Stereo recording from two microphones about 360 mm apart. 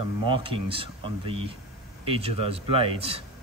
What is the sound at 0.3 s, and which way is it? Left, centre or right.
Speech, centre.